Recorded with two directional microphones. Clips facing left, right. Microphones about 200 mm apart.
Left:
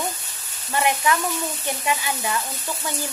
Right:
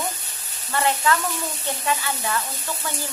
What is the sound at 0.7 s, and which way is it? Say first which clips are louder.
Speech: even; 15° left (ahead or behind).